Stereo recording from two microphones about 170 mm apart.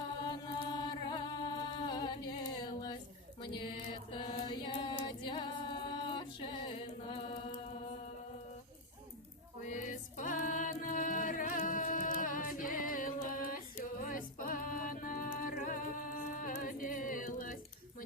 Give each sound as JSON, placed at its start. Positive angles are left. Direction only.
{"t": 0.3, "sound": "music", "side_deg": 25}
{"t": 4.1, "sound": "a capella", "side_deg": 30}
{"t": 9.6, "sound": "music", "side_deg": 50}